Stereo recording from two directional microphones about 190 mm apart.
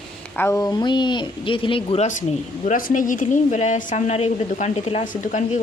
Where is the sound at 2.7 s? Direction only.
45° left (ahead or behind).